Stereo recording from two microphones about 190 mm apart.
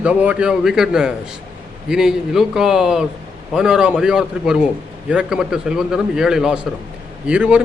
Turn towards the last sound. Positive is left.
turn(degrees=-5)  # may be behind; listen again after turning